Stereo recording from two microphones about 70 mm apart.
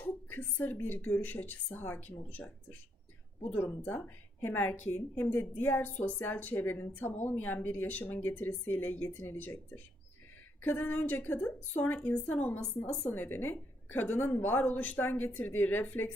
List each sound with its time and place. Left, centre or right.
0.3 s a woman's voice: left
3.5 s a woman's voice: left